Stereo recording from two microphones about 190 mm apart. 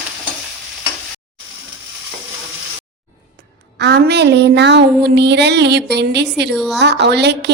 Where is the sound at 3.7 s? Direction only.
60° right (ahead or behind).